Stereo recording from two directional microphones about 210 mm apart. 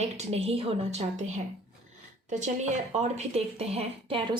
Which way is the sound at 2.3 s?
35° right (ahead or behind).